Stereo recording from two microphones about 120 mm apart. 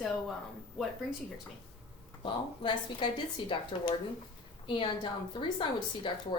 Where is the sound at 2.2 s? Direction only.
40° left (ahead or behind).